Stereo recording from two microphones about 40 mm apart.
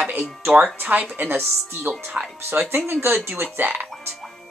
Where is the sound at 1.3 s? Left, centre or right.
Right.